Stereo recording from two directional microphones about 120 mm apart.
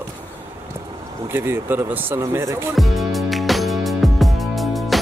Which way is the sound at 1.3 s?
20° right (ahead or behind).